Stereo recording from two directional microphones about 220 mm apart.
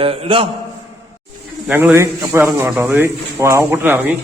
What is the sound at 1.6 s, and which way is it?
A man's voice, 10° right (ahead or behind).